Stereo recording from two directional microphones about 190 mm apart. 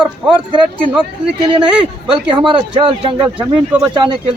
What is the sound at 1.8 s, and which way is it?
Speech, 25° right (ahead or behind).